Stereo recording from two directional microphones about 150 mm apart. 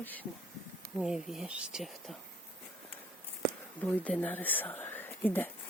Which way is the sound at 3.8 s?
10° left (ahead or behind).